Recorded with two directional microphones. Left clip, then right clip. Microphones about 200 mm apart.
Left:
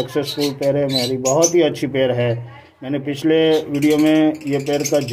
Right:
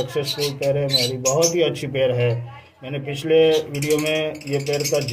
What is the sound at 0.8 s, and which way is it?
Speech, 45° left (ahead or behind).